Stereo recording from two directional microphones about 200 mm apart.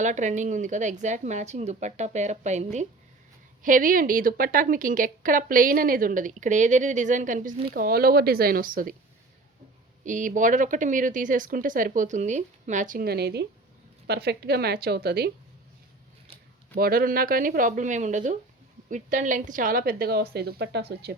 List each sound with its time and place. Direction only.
0.0 s a woman's voice: 35° right (ahead or behind)
10.0 s a woman's voice: 40° right (ahead or behind)
16.7 s a woman's voice: 50° right (ahead or behind)